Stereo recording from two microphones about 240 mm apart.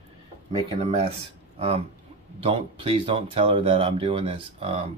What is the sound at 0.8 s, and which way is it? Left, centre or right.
Speech, right.